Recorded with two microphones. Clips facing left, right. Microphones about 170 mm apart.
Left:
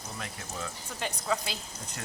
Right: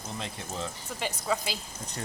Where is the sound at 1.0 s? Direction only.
5° right (ahead or behind).